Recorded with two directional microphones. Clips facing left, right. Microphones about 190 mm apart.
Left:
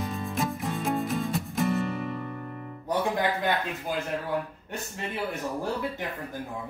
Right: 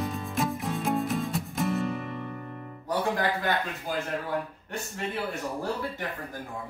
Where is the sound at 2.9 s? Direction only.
15° left (ahead or behind).